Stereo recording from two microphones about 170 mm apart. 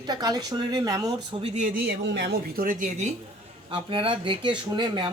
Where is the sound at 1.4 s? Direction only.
45° right (ahead or behind).